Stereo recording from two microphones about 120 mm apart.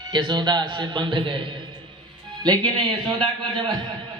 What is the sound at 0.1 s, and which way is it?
A man's voice, 40° right (ahead or behind).